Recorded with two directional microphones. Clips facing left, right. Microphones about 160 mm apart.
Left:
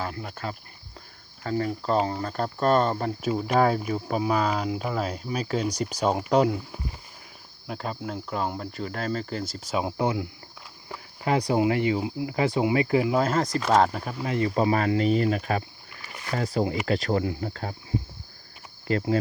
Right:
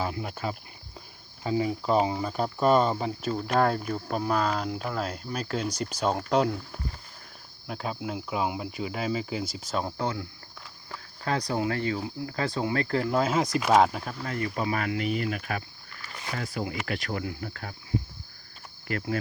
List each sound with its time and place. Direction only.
0.0 s cricket: 15° right (ahead or behind)
1.5 s speech: 10° right (ahead or behind)
14.2 s speech: 20° left (ahead or behind)
15.9 s rowboat: 15° left (ahead or behind)
16.3 s speech: 35° left (ahead or behind)
18.9 s speech: 25° left (ahead or behind)